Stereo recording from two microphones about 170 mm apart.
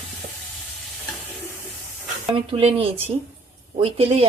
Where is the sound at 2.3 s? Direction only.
35° right (ahead or behind).